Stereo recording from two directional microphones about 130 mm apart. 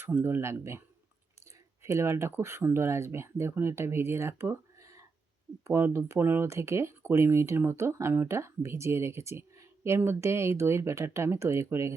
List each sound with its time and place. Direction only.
0.0 s speech: 15° right (ahead or behind)
1.8 s speech: 20° right (ahead or behind)